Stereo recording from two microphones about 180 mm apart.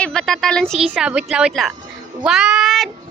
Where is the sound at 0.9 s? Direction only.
5° right (ahead or behind).